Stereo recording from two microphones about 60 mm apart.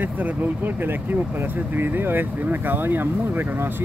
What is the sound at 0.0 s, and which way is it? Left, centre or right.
Speech, right.